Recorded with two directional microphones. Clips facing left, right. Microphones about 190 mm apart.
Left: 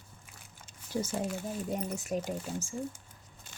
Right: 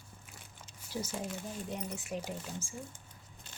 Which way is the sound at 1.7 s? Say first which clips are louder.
Left 6 dB; 40° left (ahead or behind).